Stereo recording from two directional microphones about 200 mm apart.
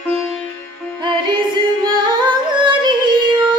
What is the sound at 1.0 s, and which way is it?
Music, 20° right (ahead or behind).